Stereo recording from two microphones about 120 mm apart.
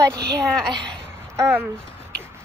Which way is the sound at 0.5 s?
5° left (ahead or behind).